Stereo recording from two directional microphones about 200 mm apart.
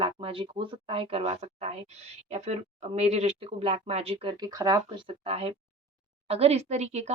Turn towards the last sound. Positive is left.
turn(degrees=-35)  # may be behind; listen again after turning